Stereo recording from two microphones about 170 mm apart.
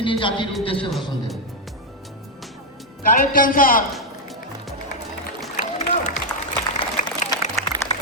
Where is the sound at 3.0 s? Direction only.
55° left (ahead or behind).